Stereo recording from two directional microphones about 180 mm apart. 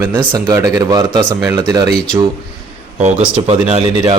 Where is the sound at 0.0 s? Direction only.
15° right (ahead or behind).